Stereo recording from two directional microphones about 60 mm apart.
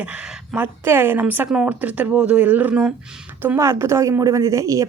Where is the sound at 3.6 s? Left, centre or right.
Right.